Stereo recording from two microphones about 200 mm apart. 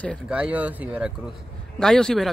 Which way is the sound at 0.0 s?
Centre (ahead or behind).